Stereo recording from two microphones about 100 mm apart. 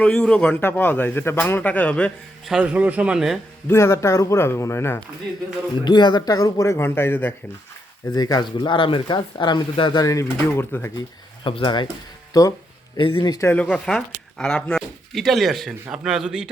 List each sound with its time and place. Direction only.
0.0 s a man's voice: 10° left (ahead or behind)
2.4 s a man's voice: 5° right (ahead or behind)
3.7 s a man's voice: 25° left (ahead or behind)
5.8 s speech: 50° left (ahead or behind); by 7.3 s 20° left (ahead or behind)
8.1 s speech: 40° left (ahead or behind)
8.5 s speech: 55° left (ahead or behind)
10.0 s a man's voice: 30° left (ahead or behind)
11.4 s speech: 55° left (ahead or behind)
12.3 s speech: 35° left (ahead or behind)
13.0 s speech: 55° left (ahead or behind)
13.6 s speech: 10° left (ahead or behind)